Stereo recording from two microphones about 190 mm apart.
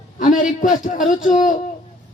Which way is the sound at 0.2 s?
40° left (ahead or behind).